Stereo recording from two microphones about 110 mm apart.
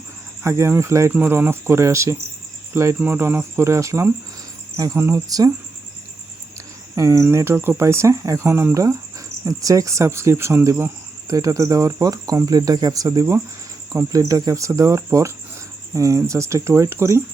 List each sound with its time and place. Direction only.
0.4 s speech: 25° right (ahead or behind)
1.1 s speech: 15° right (ahead or behind)
6.9 s speech: 30° right (ahead or behind)